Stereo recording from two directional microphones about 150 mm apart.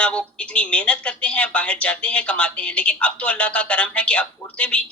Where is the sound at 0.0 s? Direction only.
10° left (ahead or behind).